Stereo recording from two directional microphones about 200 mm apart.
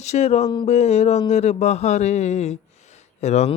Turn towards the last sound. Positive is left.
turn(degrees=35)  # may be behind; listen again after turning